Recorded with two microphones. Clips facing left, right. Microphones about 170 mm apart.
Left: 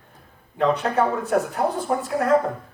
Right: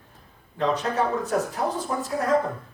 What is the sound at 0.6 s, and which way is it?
A man's voice, 60° left (ahead or behind).